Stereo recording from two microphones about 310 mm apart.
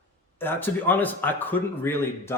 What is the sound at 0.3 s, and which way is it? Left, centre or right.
Speech, centre.